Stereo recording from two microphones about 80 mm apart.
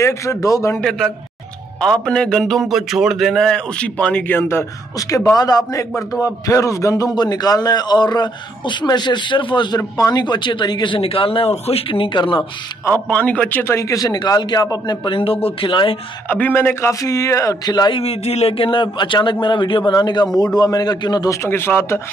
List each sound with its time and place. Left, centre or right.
0.0 s a man's voice: left
0.7 s a man's voice: centre
2.6 s a man's voice: centre
4.4 s a man's voice: left
5.3 s a man's voice: left
9.8 s speech: left
12.8 s a man's voice: left
13.7 s a man's voice: left
15.0 s speech: left
16.3 s a man's voice: left
17.0 s a man's voice: left
17.6 s speech: left
18.6 s a man's voice: left
21.3 s a man's voice: left